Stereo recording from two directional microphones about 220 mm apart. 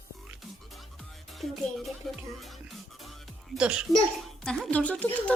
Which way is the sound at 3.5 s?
5° right (ahead or behind).